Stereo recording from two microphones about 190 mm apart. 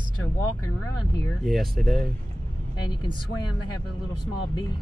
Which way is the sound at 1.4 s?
Centre (ahead or behind).